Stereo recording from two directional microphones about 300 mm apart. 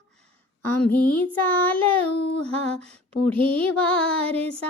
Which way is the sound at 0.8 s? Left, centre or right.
Centre.